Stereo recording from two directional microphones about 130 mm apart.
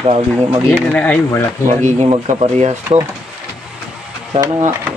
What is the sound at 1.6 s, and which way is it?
Speech, 65° right (ahead or behind).